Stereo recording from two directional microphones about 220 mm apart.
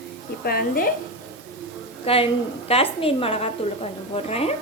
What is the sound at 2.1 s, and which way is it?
A woman's voice, 25° left (ahead or behind).